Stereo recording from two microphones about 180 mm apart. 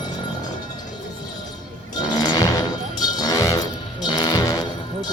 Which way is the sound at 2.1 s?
20° left (ahead or behind).